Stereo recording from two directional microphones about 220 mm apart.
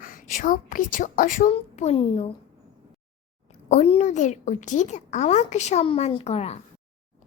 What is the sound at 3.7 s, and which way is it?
Speech, 30° left (ahead or behind).